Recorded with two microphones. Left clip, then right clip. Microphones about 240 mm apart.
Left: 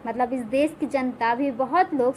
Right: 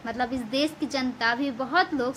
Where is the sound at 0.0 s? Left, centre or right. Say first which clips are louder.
Left 4 dB; centre.